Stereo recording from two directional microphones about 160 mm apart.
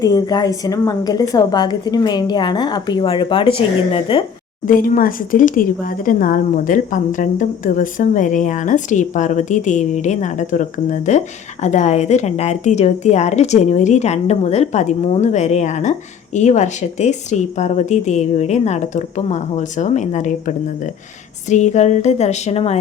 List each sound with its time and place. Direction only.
0.0 s a woman's voice: 25° left (ahead or behind)
4.6 s a woman's voice: 60° left (ahead or behind); by 22.8 s 40° left (ahead or behind)